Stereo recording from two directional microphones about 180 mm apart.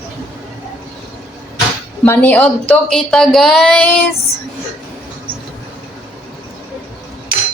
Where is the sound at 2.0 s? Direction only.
10° left (ahead or behind).